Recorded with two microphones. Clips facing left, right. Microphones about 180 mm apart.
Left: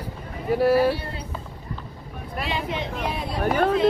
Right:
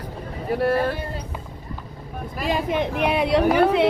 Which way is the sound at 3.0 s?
70° right (ahead or behind).